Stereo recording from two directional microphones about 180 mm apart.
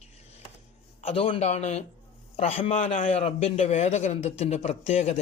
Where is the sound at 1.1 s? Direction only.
30° left (ahead or behind).